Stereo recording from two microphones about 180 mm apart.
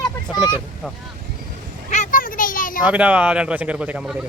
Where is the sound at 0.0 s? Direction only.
25° left (ahead or behind).